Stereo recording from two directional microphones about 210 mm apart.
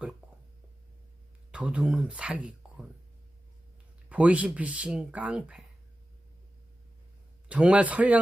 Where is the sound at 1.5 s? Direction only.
5° right (ahead or behind).